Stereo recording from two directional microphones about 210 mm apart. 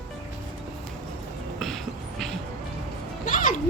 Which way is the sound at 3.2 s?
40° left (ahead or behind).